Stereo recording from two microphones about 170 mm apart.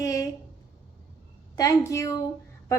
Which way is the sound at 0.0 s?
20° left (ahead or behind).